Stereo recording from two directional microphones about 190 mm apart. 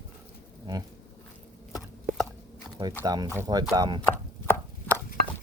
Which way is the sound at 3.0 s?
20° right (ahead or behind).